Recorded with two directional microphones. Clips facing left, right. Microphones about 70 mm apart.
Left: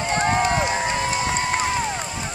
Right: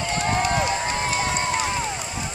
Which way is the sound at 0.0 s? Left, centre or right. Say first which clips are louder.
Left 3 dB; left.